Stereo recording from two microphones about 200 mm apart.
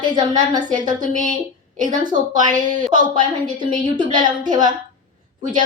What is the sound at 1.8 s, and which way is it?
Speech, 20° right (ahead or behind).